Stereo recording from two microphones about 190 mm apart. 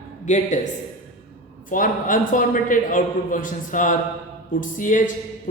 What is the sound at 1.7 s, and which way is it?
A man's voice, 45° left (ahead or behind).